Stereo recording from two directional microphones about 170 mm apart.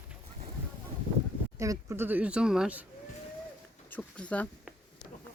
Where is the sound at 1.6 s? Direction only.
15° right (ahead or behind).